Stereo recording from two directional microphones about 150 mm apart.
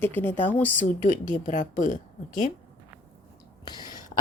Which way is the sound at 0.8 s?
60° left (ahead or behind).